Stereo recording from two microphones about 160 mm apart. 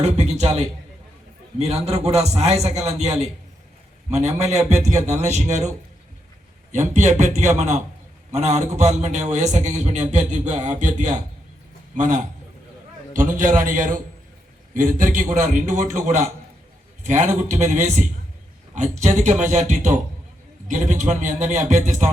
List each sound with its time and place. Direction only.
0.0 s a man's voice: 40° right (ahead or behind)